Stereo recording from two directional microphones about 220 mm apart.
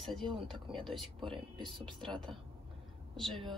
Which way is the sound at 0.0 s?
Centre (ahead or behind).